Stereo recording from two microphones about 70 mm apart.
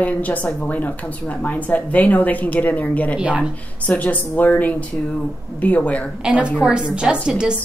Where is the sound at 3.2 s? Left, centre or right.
Centre.